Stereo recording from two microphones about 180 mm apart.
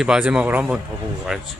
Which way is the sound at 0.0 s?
5° right (ahead or behind).